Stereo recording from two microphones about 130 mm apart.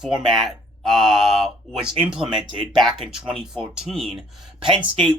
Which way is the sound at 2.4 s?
40° right (ahead or behind).